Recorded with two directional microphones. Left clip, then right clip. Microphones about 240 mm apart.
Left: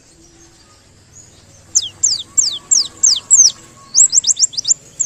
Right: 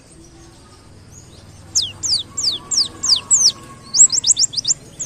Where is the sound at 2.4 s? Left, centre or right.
Centre.